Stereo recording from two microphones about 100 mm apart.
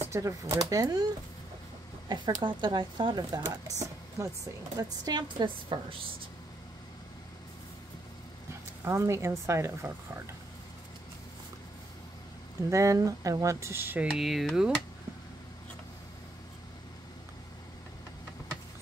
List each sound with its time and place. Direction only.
0.1 s speech: 30° right (ahead or behind)
2.0 s speech: 50° right (ahead or behind)
5.4 s a woman's voice: 60° right (ahead or behind)
8.8 s speech: 30° right (ahead or behind)
12.6 s speech: 30° right (ahead or behind)
14.1 s speech: centre (ahead or behind)